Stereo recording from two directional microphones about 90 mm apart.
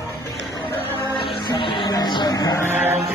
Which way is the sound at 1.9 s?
50° left (ahead or behind).